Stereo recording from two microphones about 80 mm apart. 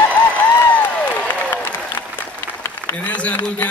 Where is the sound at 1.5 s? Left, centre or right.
Left.